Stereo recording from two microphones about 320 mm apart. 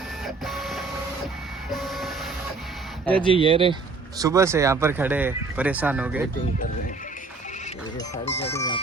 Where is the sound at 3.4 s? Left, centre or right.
Centre.